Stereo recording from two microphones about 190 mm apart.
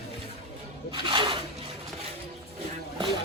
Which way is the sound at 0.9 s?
25° right (ahead or behind).